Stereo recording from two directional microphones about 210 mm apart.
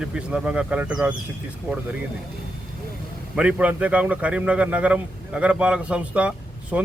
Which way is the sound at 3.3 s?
5° right (ahead or behind).